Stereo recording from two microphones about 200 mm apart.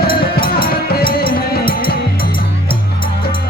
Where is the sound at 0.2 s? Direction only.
50° left (ahead or behind).